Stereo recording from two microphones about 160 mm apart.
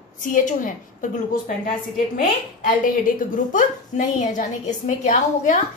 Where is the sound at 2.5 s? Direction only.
55° left (ahead or behind).